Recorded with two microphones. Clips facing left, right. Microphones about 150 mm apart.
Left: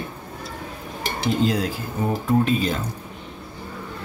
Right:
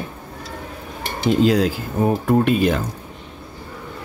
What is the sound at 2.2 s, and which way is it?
Speech, 70° right (ahead or behind).